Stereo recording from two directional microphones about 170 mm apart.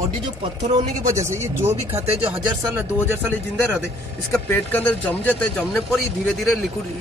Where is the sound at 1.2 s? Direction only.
15° right (ahead or behind).